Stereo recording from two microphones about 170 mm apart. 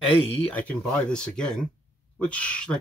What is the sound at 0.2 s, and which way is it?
Speech, 35° left (ahead or behind).